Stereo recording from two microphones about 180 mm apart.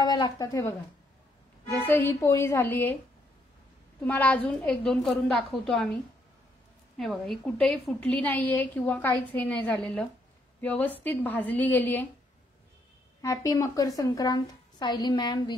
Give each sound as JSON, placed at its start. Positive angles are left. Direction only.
{"t": 0.0, "sound": "a woman's voice", "side_deg": 20}
{"t": 4.0, "sound": "a woman's voice", "side_deg": 10}
{"t": 7.0, "sound": "a woman's voice", "side_deg": 0}
{"t": 13.2, "sound": "a woman's voice", "side_deg": 20}